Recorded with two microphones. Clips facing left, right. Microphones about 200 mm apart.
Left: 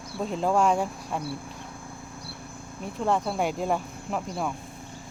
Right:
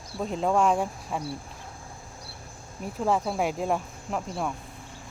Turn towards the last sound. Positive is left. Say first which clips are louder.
# left 1 dB
turn(degrees=0)  # may be behind; listen again after turning